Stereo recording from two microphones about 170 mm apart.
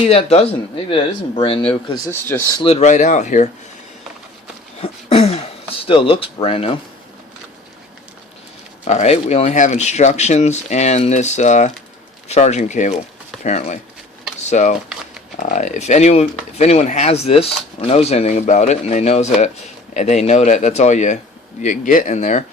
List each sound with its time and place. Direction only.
0.0 s speech: 40° left (ahead or behind)
2.0 s speech: 15° left (ahead or behind)
2.6 s speech: 35° left (ahead or behind)
4.8 s speech: 35° left (ahead or behind)
8.8 s speech: 40° left (ahead or behind)